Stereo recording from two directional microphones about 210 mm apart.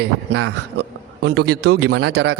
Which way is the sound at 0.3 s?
90° right.